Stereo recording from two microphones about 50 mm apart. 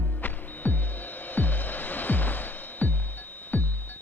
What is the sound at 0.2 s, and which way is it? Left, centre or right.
Music, left.